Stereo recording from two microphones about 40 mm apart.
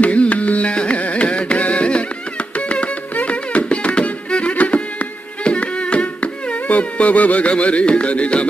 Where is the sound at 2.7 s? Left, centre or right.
Left.